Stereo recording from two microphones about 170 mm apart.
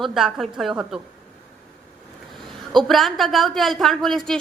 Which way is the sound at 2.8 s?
Centre (ahead or behind).